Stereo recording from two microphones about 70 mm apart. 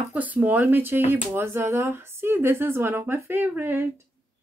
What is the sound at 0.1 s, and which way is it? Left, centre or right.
Speech, right.